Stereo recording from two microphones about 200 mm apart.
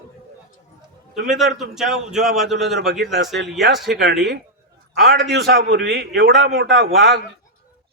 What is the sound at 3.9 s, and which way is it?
A man's voice, 55° right (ahead or behind).